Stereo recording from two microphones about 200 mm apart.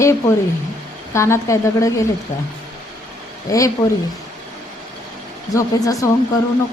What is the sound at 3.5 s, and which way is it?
Speech, 15° left (ahead or behind).